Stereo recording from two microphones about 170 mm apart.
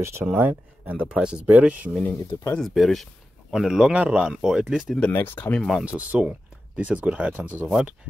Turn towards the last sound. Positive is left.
turn(degrees=-10)  # may be behind; listen again after turning